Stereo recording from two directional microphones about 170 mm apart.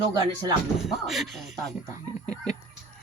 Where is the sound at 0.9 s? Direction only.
Centre (ahead or behind).